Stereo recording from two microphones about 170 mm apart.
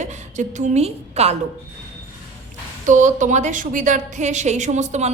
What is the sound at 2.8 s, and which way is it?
A woman's voice, 45° right (ahead or behind).